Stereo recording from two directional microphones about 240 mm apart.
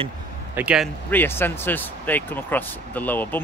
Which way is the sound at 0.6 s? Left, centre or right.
Centre.